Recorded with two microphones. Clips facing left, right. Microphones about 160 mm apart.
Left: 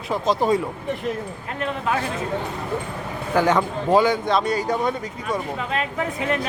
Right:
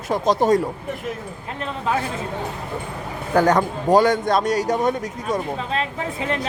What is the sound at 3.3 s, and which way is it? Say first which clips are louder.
A man's voice: right 2 dB; 40° right (ahead or behind).